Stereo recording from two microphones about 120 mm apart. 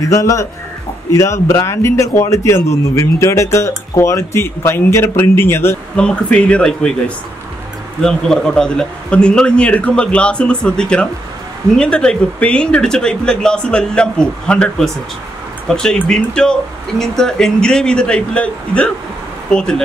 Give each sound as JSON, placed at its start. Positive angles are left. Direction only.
{"t": 0.1, "sound": "a man's voice", "side_deg": 25}
{"t": 5.9, "sound": "speech", "side_deg": 10}
{"t": 8.0, "sound": "speech", "side_deg": 5}